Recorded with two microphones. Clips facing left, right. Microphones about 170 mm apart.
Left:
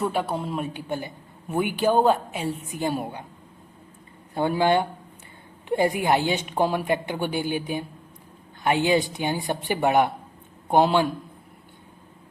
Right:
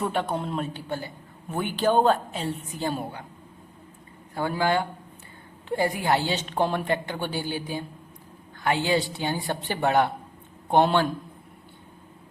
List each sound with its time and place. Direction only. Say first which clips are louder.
0.0 s a man's voice: left 1 dB; 5° left (ahead or behind)
4.4 s a man's voice: left 4 dB; 20° left (ahead or behind)